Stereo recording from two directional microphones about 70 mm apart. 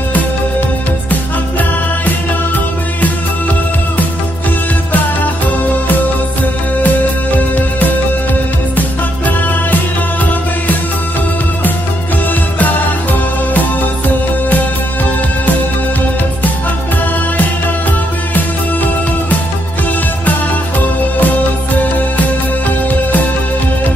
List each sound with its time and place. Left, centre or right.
1.6 s music: left
6.8 s music: left
13.6 s music: left
21.2 s music: left